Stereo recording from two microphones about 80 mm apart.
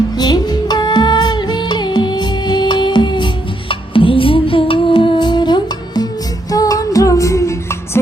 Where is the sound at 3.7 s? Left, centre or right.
Left.